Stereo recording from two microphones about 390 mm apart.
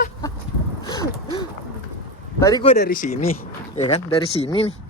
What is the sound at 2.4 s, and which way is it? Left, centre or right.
Speech, centre.